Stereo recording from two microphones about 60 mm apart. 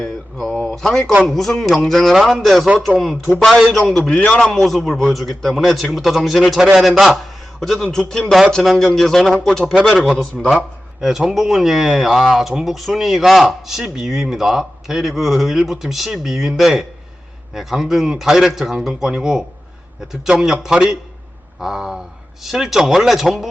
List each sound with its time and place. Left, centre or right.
0.0 s a sound: centre
0.8 s speech: centre
4.1 s a man's voice: left
4.4 s speech: centre
7.6 s speech: centre
8.3 s speech: centre
9.9 s a man's voice: centre